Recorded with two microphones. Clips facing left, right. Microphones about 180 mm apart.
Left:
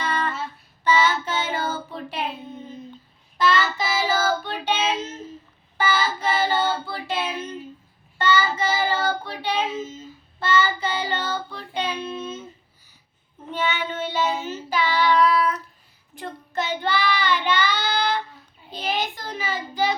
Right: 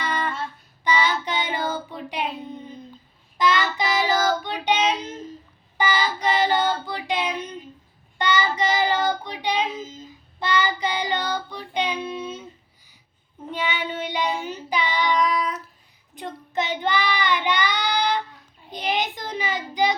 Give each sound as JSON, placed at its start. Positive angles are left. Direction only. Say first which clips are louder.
{"t": 0.0, "sound": "child singing", "louder": "left 1 dB", "side_deg": -10}
{"t": 3.8, "sound": "child singing", "louder": "right 2 dB", "side_deg": 5}
{"t": 4.4, "sound": "child singing", "louder": "right 2 dB", "side_deg": -15}
{"t": 13.5, "sound": "child singing", "louder": "left 1 dB", "side_deg": -15}